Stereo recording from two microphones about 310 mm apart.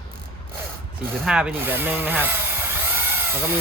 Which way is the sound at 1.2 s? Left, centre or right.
Centre.